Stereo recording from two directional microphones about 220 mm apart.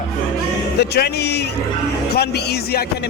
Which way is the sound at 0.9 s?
50° left (ahead or behind).